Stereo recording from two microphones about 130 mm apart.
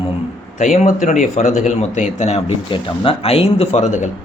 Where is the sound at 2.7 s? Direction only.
45° left (ahead or behind); by 4.1 s 65° left (ahead or behind).